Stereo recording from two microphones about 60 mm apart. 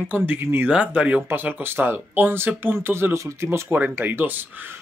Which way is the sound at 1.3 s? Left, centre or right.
Right.